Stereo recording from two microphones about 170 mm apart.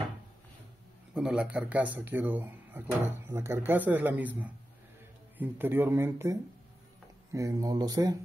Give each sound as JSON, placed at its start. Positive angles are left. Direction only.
{"t": 1.1, "sound": "speech", "side_deg": -5}
{"t": 7.3, "sound": "speech", "side_deg": -20}